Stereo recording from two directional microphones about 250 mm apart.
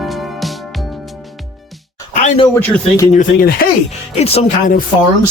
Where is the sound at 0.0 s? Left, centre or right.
Centre.